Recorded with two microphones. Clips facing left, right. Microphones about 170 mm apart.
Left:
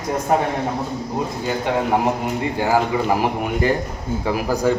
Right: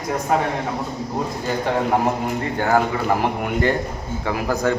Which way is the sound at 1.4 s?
5° left (ahead or behind).